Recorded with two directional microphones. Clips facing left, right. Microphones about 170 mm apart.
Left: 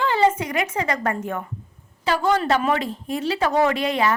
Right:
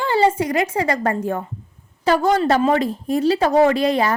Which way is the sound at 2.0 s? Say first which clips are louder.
Right 4 dB; 45° right (ahead or behind).